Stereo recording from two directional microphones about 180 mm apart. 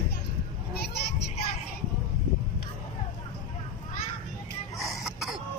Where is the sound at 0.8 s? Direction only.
60° left (ahead or behind).